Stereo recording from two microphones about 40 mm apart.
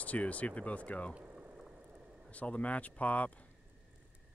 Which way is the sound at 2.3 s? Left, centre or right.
Left.